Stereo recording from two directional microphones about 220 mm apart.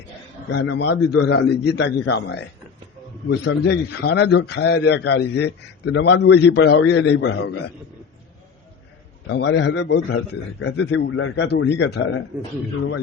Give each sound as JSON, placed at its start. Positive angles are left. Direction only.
{"t": 0.5, "sound": "a man's voice", "side_deg": 50}
{"t": 9.2, "sound": "a man's voice", "side_deg": 50}